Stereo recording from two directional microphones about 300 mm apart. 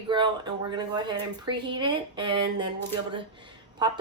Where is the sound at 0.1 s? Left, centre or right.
Centre.